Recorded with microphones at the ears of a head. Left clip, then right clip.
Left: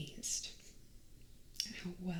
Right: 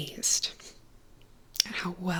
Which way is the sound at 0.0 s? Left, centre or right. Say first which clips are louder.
Right 13 dB; right.